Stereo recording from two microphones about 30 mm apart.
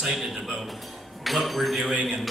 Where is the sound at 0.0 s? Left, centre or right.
Centre.